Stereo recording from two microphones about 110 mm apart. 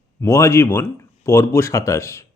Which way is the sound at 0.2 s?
25° left (ahead or behind).